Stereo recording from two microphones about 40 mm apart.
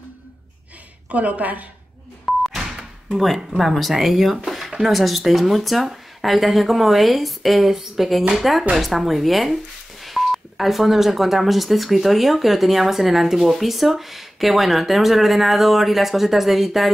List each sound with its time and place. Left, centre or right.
1.0 s a woman's voice: right
2.5 s a sound: centre
3.3 s speech: centre